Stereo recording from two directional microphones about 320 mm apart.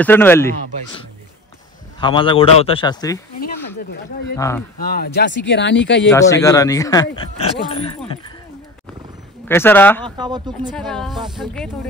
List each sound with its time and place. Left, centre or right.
0.0 s speech: centre
2.0 s speech: centre
3.3 s speech: left
4.4 s speech: centre
4.7 s speech: left
6.0 s speech: centre
9.5 s speech: centre
10.0 s speech: centre
10.8 s speech: centre